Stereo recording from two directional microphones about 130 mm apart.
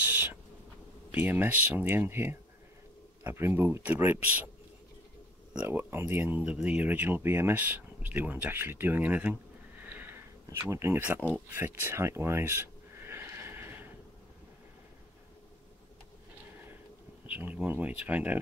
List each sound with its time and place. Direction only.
0.0 s owl: 15° right (ahead or behind)
1.1 s speech: 15° right (ahead or behind)
5.7 s speech: 15° right (ahead or behind)
9.8 s a sound: 15° right (ahead or behind)
17.3 s speech: 10° right (ahead or behind)